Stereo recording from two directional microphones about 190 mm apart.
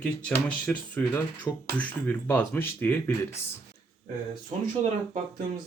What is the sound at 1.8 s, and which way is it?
Speech, 10° left (ahead or behind).